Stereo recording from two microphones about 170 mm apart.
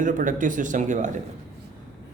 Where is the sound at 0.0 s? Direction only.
50° right (ahead or behind).